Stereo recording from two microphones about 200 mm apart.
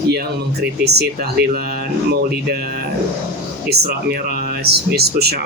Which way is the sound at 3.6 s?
55° right (ahead or behind).